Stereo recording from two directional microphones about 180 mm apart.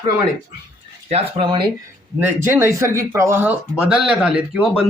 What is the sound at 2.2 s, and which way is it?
Speech, 15° right (ahead or behind).